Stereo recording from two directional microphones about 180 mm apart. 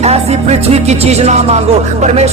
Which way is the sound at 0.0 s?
35° right (ahead or behind).